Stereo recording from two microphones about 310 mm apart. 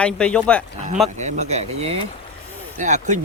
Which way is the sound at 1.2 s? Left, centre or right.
Right.